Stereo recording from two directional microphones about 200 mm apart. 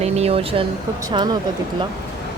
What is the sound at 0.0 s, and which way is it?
Speech, 30° right (ahead or behind).